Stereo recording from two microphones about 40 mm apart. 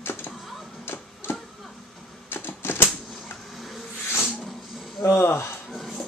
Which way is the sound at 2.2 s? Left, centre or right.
Left.